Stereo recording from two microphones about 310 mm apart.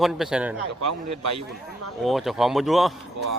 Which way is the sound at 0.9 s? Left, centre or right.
Right.